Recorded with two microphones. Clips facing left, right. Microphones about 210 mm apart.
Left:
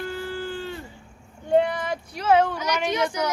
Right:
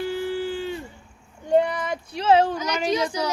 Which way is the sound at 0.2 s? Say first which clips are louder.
Right 4 dB; 15° right (ahead or behind).